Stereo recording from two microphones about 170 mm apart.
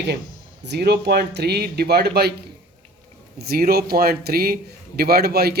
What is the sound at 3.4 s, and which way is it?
A man's voice, 65° right (ahead or behind).